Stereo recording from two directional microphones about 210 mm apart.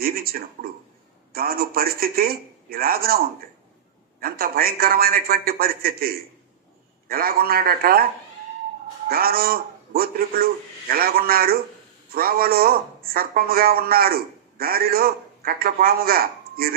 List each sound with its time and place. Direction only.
0.0 s a man's voice: 45° right (ahead or behind)
9.0 s a man's voice: 45° right (ahead or behind)